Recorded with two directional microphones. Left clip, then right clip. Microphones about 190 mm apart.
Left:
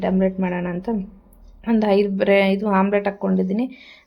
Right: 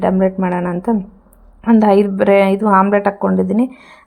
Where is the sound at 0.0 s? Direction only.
15° right (ahead or behind).